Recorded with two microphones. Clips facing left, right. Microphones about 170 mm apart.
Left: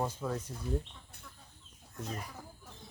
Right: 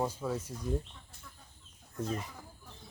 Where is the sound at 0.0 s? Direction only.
5° right (ahead or behind).